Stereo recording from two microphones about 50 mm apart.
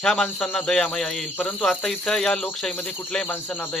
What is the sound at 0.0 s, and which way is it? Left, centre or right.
Speech, centre.